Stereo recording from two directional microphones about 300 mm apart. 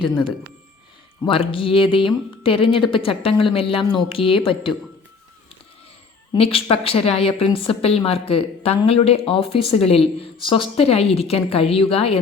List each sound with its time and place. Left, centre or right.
0.0 s speech: centre
6.3 s a woman's voice: centre